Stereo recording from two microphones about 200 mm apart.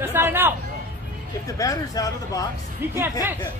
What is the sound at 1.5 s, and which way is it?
Speech, 15° left (ahead or behind).